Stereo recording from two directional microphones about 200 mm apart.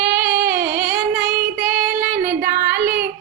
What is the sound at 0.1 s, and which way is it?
Music, 55° right (ahead or behind).